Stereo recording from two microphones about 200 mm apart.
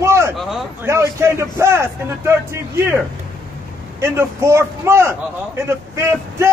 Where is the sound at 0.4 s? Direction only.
Centre (ahead or behind).